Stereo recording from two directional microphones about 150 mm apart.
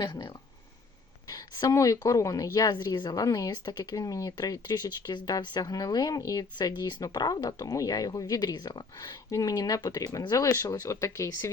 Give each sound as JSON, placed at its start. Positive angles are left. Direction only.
{"t": 0.0, "sound": "a woman's voice", "side_deg": 30}